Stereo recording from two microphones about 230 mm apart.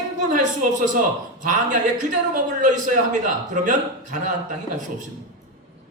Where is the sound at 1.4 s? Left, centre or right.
Right.